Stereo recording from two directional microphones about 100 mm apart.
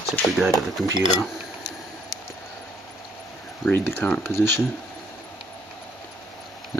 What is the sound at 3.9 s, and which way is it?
Speech, 20° left (ahead or behind).